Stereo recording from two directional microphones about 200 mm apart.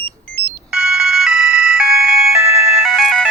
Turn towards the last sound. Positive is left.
turn(degrees=0)  # may be behind; listen again after turning